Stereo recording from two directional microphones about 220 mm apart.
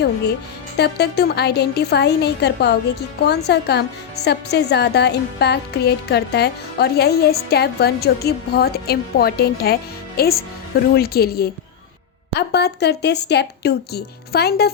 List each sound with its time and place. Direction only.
0.8 s a woman's voice: 50° left (ahead or behind)